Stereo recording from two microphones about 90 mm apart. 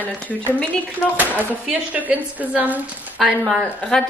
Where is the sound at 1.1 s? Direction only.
20° right (ahead or behind).